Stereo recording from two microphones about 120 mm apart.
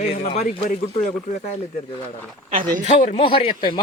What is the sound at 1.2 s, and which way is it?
Speech, 90° left.